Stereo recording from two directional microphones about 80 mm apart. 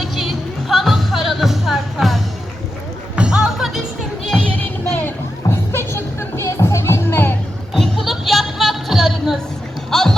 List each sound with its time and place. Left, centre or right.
0.0 s music: centre
4.5 s music: centre
5.5 s music: left
7.7 s a sound: centre